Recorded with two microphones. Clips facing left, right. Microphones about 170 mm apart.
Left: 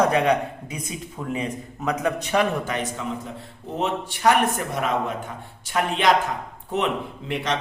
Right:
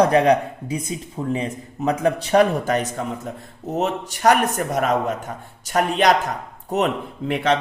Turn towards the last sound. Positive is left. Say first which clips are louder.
# right 6 dB
turn(degrees=-50)  # may be behind; listen again after turning